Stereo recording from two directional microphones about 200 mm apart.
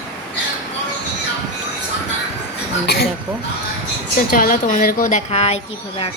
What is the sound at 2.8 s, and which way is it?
Speech, 55° left (ahead or behind).